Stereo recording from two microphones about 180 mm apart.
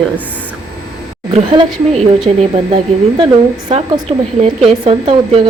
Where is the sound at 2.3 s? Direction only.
40° right (ahead or behind).